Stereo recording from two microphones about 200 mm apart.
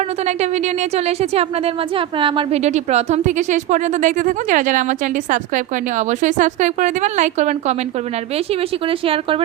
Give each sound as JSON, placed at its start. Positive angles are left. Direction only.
{"t": 0.3, "sound": "a woman's voice", "side_deg": -35}
{"t": 8.9, "sound": "a woman's voice", "side_deg": -25}